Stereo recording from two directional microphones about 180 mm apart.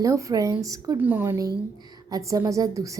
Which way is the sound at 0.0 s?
20° right (ahead or behind).